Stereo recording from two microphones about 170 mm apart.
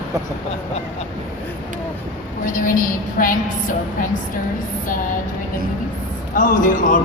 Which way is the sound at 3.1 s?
55° left (ahead or behind).